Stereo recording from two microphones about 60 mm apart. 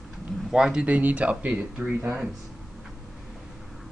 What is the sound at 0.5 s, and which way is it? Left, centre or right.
Speech, centre.